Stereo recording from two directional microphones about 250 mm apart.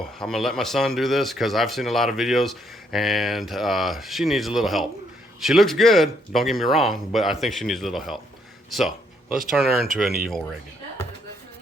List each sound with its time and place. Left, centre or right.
0.2 s speech: centre
9.3 s speech: centre